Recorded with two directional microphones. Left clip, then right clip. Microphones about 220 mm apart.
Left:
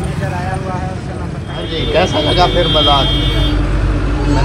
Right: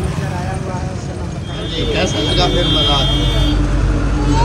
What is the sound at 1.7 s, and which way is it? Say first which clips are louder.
Speech: left 4 dB; 5° right (ahead or behind).